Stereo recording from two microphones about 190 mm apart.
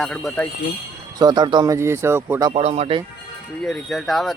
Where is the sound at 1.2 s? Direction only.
20° right (ahead or behind).